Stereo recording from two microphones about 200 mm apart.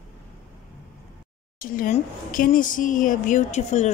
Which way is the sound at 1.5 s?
45° left (ahead or behind).